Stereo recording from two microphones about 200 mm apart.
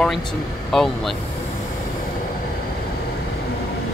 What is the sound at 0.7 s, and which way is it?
Speech, centre (ahead or behind).